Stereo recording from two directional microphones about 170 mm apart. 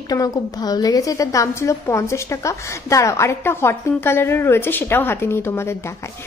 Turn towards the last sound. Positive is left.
turn(degrees=15)  # may be behind; listen again after turning